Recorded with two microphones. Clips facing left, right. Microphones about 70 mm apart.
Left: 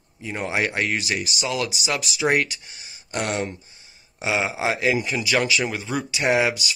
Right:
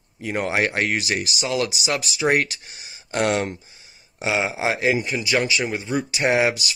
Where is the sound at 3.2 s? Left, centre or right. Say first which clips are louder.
Right 4 dB; right.